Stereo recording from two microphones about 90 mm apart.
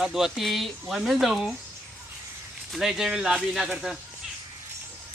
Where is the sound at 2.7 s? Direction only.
5° right (ahead or behind).